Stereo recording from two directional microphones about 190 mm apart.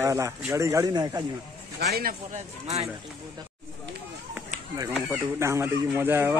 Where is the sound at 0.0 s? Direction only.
15° right (ahead or behind).